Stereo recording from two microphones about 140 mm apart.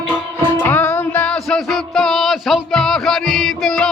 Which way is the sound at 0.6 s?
15° left (ahead or behind).